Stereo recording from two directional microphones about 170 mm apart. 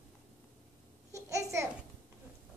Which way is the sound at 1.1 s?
15° right (ahead or behind).